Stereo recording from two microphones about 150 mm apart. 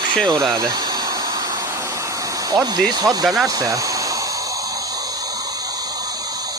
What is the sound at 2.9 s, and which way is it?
Speech, 25° right (ahead or behind).